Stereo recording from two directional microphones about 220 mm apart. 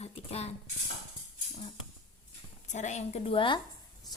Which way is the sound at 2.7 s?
30° left (ahead or behind).